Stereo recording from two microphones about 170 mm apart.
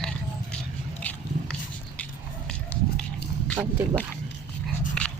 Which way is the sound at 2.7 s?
75° left (ahead or behind).